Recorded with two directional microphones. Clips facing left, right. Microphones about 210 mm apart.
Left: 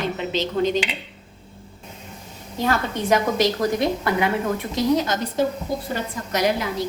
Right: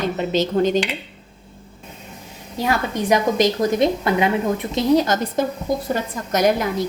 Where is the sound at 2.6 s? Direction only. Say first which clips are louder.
Right 1 dB; 15° right (ahead or behind).